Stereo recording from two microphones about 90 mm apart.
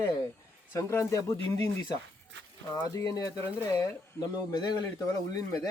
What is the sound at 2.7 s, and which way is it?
Speech, 40° left (ahead or behind).